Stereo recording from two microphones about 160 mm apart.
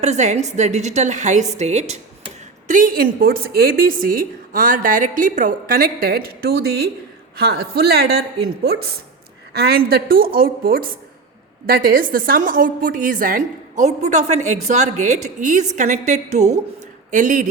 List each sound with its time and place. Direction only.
0.0 s a woman's voice: 45° right (ahead or behind)
2.6 s a woman's voice: 60° right (ahead or behind); by 9.0 s 90° right
9.5 s a woman's voice: 80° right; by 17.4 s 55° right (ahead or behind)